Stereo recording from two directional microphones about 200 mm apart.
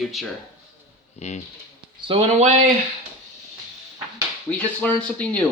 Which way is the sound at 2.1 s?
30° right (ahead or behind).